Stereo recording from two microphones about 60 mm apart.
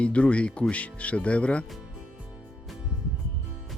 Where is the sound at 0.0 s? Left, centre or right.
Left.